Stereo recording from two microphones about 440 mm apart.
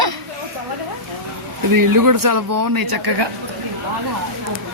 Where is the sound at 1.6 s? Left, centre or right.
Right.